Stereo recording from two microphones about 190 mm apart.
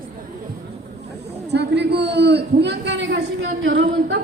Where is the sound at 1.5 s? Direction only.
60° right (ahead or behind).